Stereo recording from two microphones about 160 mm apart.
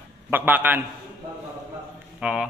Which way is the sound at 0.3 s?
10° right (ahead or behind).